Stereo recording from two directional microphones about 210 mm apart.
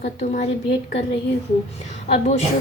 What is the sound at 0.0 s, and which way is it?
Speech, 35° left (ahead or behind).